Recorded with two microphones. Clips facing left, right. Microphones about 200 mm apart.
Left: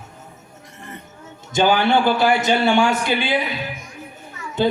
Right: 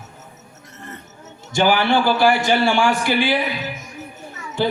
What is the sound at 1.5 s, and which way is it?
A man's voice, 20° left (ahead or behind).